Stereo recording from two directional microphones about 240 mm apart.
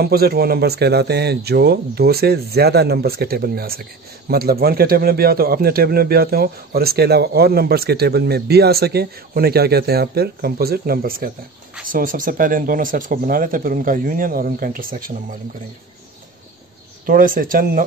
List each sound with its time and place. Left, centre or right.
0.0 s speech: right
17.0 s speech: right